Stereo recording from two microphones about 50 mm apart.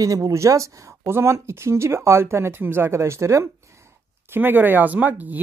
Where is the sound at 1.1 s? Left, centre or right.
Right.